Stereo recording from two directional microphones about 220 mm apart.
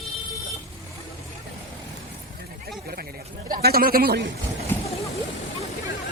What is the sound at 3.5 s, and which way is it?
Speech, 40° right (ahead or behind).